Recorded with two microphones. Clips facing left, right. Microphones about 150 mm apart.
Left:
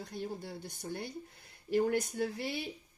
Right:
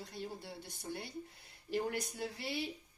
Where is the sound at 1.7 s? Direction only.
50° left (ahead or behind).